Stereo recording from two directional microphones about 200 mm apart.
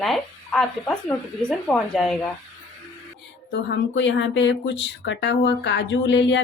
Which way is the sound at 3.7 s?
65° left (ahead or behind).